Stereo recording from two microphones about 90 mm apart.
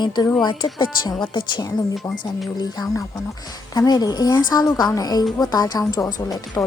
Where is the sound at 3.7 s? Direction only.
45° left (ahead or behind).